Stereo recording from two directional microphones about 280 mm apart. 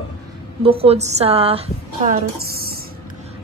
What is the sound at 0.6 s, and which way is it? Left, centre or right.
A woman's voice, right.